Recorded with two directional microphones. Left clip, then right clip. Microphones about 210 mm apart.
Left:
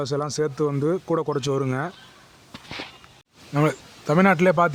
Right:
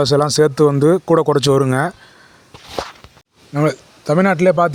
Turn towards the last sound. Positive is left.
turn(degrees=-15)  # may be behind; listen again after turning